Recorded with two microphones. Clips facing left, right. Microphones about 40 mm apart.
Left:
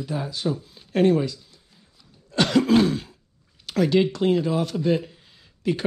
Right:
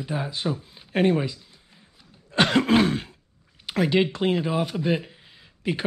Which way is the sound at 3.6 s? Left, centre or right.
Right.